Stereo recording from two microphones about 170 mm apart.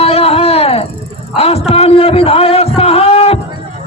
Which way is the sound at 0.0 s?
35° left (ahead or behind).